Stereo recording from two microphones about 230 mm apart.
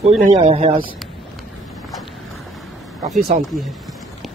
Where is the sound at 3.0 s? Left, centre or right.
Centre.